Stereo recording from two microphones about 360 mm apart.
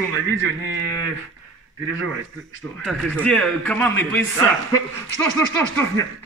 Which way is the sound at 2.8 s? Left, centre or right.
Centre.